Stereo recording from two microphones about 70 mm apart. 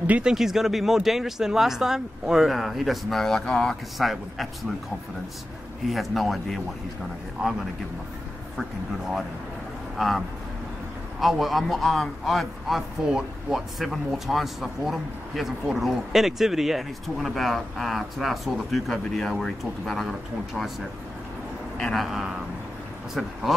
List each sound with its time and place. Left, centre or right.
0.0 s speech: right
0.3 s a man's voice: centre
4.0 s a man's voice: centre
5.9 s a man's voice: centre
9.9 s a man's voice: centre
21.9 s a man's voice: centre